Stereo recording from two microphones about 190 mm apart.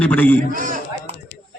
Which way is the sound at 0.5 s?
45° right (ahead or behind).